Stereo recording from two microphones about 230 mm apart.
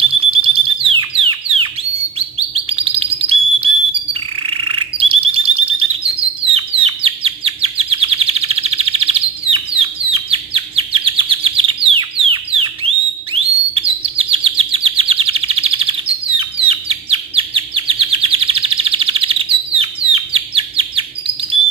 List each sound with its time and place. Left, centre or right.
0.3 s alarm: right
2.1 s bird: right
6.4 s chirp: right
13.3 s bird: right